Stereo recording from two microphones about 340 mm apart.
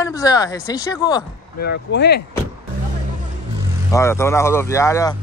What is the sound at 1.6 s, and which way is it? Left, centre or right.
Speech, left.